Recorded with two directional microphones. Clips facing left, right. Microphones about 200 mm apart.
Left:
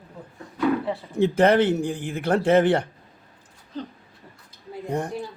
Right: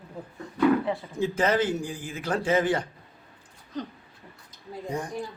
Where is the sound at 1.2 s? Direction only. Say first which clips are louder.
Left 7 dB; 65° left (ahead or behind).